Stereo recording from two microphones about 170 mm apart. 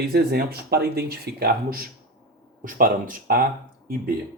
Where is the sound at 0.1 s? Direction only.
70° right (ahead or behind).